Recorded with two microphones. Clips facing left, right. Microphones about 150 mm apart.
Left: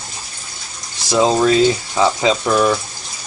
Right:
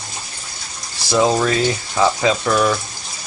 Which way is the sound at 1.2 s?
20° left (ahead or behind).